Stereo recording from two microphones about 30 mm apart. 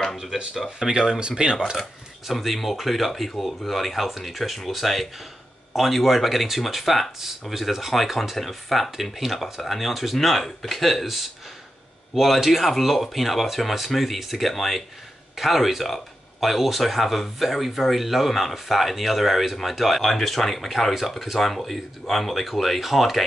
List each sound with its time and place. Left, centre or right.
0.7 s speech: right
1.8 s speech: centre
20.0 s speech: centre